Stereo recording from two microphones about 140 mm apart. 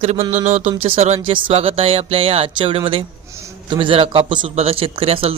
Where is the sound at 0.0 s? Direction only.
50° right (ahead or behind).